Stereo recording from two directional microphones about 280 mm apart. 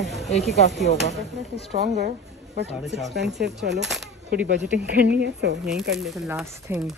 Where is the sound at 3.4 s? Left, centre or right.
Right.